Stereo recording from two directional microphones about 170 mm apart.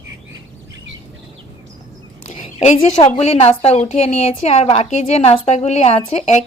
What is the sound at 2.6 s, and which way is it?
A woman's voice, 40° left (ahead or behind).